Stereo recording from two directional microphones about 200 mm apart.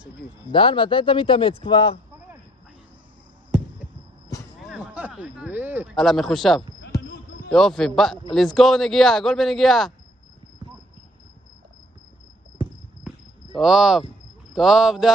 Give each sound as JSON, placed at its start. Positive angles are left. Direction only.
{"t": 0.5, "sound": "speech", "side_deg": 25}
{"t": 4.6, "sound": "speech", "side_deg": -5}
{"t": 5.9, "sound": "a man's voice", "side_deg": 0}
{"t": 13.6, "sound": "a man's voice", "side_deg": 0}